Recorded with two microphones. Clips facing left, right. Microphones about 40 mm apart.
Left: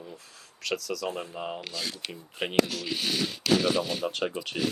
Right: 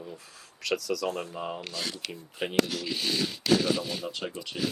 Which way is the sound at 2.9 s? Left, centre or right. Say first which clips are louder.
Left 1 dB; left.